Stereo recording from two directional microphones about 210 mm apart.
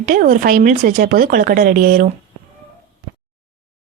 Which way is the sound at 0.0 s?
40° right (ahead or behind).